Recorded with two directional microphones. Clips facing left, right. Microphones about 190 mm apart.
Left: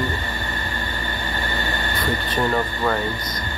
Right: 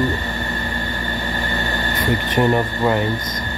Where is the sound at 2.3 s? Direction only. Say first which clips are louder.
Right 5 dB; 20° right (ahead or behind).